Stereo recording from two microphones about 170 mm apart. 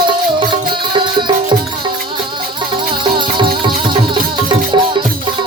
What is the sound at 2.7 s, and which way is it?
Music, 30° right (ahead or behind).